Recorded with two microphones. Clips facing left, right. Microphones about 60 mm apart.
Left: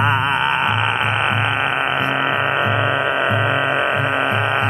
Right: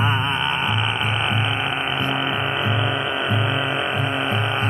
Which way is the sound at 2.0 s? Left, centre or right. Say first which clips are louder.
Left 4 dB; left.